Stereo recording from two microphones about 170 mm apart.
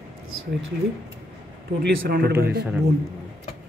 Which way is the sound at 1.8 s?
70° right (ahead or behind).